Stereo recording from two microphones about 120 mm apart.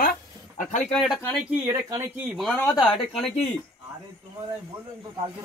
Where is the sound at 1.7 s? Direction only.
25° right (ahead or behind).